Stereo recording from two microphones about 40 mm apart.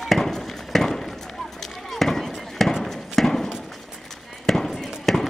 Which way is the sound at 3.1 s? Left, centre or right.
Centre.